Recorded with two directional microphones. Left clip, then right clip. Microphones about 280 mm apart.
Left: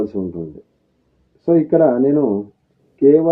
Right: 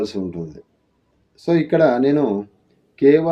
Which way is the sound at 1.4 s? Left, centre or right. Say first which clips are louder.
Left 2 dB; right.